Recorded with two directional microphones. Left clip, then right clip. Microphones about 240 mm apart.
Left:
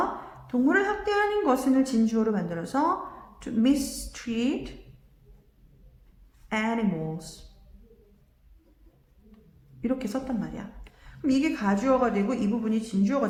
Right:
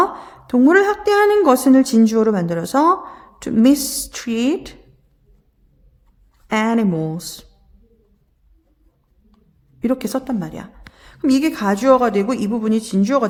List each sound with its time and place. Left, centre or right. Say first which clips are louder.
0.4 s a woman's voice: right 11 dB; right
6.5 s a woman's voice: right 10 dB; right
9.8 s a woman's voice: right 9 dB; right